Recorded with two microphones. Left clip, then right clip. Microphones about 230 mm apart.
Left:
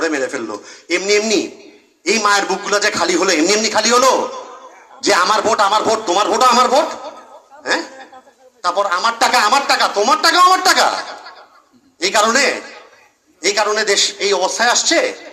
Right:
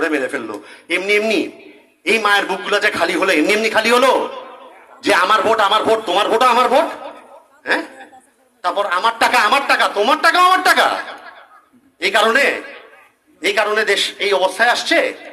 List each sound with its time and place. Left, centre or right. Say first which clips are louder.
0.0 s a man's voice: even; right
8.6 s speech: left 1 dB; right